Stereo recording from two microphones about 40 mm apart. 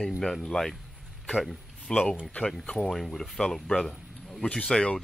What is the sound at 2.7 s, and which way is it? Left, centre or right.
Speech, centre.